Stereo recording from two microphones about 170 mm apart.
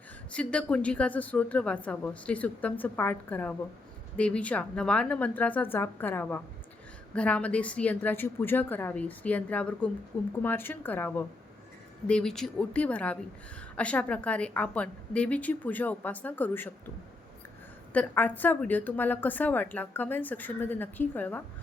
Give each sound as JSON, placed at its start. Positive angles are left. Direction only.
{"t": 0.3, "sound": "a woman's voice", "side_deg": 5}
{"t": 17.9, "sound": "a woman's voice", "side_deg": 10}